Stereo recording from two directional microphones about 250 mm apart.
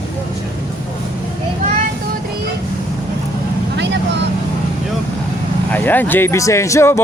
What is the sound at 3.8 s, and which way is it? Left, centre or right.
Vehicle, right.